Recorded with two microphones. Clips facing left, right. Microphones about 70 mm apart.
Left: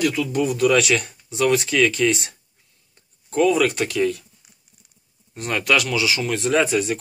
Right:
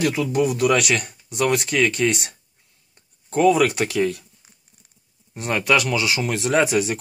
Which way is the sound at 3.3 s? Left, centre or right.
Right.